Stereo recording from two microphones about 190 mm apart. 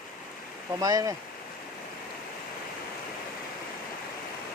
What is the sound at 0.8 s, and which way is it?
Speech, 20° right (ahead or behind).